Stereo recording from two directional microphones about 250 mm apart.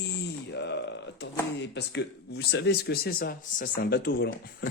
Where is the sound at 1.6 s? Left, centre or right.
Left.